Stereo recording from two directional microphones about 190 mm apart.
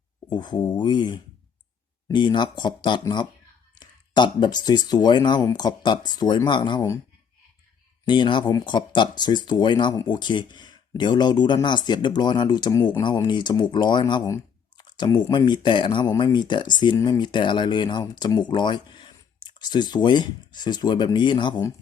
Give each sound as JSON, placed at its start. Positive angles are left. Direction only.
{"t": 0.3, "sound": "speech", "side_deg": 25}
{"t": 8.0, "sound": "speech", "side_deg": 25}